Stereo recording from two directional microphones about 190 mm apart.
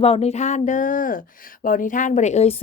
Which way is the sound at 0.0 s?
30° left (ahead or behind).